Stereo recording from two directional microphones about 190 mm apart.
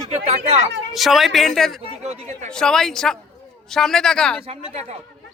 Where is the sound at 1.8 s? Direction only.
35° right (ahead or behind).